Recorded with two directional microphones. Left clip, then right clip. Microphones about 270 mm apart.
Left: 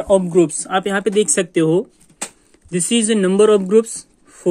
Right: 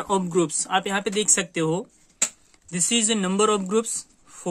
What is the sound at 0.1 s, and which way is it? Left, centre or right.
Speech, centre.